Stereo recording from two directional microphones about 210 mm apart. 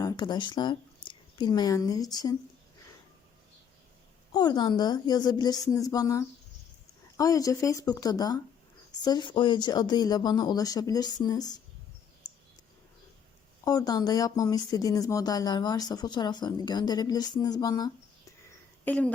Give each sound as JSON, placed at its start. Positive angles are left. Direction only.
{"t": 0.0, "sound": "speech", "side_deg": 20}
{"t": 4.3, "sound": "speech", "side_deg": 20}
{"t": 13.7, "sound": "speech", "side_deg": 15}
{"t": 18.9, "sound": "speech", "side_deg": 5}